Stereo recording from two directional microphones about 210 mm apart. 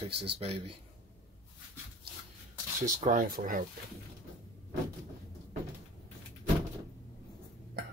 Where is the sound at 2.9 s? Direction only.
40° right (ahead or behind).